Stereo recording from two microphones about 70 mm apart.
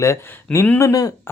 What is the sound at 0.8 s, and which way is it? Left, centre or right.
Speech, left.